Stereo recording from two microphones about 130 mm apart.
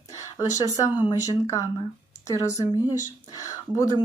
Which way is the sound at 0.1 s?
25° left (ahead or behind).